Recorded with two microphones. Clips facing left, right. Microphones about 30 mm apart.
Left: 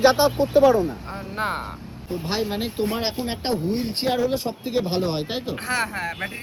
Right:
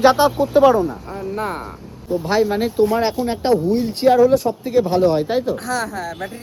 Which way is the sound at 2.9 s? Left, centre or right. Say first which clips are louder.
Right 7 dB; left.